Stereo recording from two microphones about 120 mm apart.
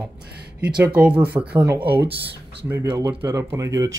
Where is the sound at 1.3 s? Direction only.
25° right (ahead or behind).